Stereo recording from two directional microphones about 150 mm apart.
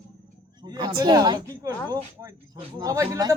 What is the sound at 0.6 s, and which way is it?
Speech, 30° right (ahead or behind).